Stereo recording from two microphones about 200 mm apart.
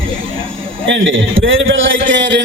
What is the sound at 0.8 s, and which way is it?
A man's voice, 75° right (ahead or behind).